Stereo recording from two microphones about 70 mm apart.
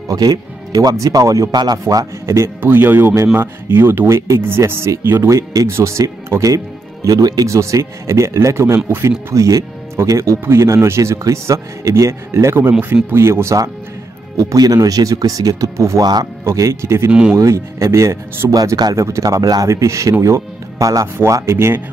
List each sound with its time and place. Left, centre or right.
0.1 s speech: right
0.9 s a man's voice: right
2.6 s speech: right
5.3 s a man's voice: right
5.7 s speech: right
7.1 s a man's voice: right
7.4 s speech: right
9.3 s speech: right
14.3 s a man's voice: right
16.0 s speech: right
16.4 s speech: right
17.1 s speech: centre
17.4 s speech: right
21.2 s speech: right